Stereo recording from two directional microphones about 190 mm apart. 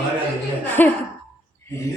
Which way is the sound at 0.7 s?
10° left (ahead or behind).